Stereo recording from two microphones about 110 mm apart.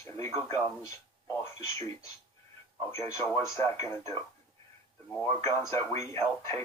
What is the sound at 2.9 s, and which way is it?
Speech, 30° left (ahead or behind).